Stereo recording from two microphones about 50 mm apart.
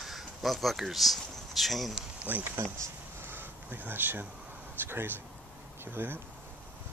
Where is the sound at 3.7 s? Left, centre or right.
Right.